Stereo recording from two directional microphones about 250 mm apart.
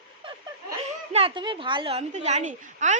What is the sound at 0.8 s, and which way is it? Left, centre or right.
A woman's voice, right.